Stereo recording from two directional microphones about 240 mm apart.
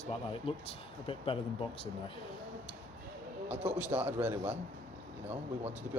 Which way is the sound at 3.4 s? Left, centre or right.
Centre.